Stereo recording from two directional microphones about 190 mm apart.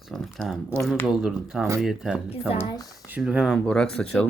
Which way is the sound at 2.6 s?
20° left (ahead or behind).